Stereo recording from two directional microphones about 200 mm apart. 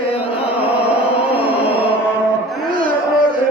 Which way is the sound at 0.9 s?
30° left (ahead or behind).